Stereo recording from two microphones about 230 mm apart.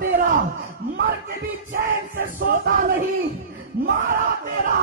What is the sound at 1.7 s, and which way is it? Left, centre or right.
Speech, right.